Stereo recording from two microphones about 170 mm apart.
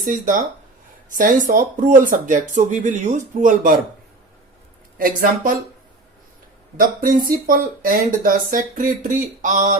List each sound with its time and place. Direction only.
0.0 s speech: 50° right (ahead or behind)
4.9 s speech: 55° right (ahead or behind)
6.7 s speech: 55° right (ahead or behind)